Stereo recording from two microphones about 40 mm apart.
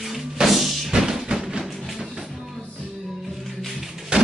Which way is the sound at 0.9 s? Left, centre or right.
Centre.